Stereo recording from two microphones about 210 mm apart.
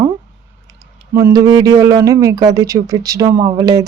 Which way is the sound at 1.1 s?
15° right (ahead or behind).